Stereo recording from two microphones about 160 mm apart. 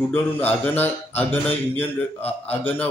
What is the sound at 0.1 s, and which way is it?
Mantra, 10° left (ahead or behind).